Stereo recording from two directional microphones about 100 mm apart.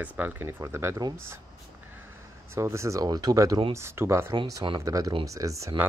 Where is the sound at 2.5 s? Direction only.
30° right (ahead or behind).